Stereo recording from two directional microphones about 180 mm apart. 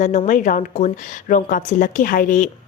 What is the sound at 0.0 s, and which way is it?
Speech, 40° left (ahead or behind).